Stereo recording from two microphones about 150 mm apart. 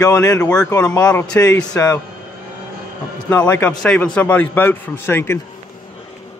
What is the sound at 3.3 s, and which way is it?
A man's voice, 10° left (ahead or behind).